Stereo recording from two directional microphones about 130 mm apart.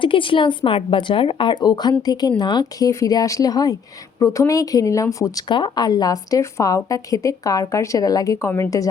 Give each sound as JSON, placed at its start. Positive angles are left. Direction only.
{"t": 0.0, "sound": "a woman's voice", "side_deg": 40}